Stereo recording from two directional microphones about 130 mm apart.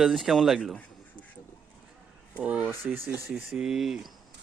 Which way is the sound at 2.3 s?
10° right (ahead or behind).